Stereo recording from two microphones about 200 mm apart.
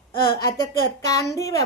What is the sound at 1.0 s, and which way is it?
Speech, 15° left (ahead or behind).